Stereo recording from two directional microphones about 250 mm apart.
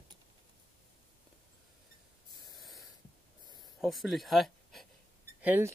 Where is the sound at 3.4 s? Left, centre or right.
Centre.